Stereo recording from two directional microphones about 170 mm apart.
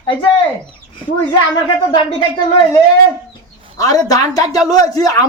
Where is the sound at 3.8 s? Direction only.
20° left (ahead or behind).